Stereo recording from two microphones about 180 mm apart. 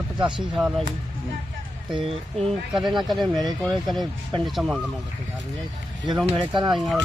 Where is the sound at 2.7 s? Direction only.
Centre (ahead or behind).